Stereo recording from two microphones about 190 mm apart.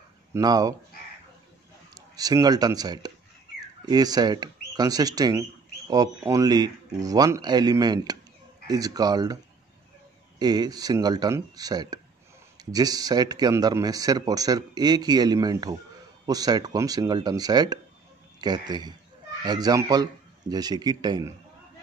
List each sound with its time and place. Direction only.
0.3 s speech: 20° right (ahead or behind)
2.0 s speech: 20° right (ahead or behind)
10.4 s speech: 20° right (ahead or behind)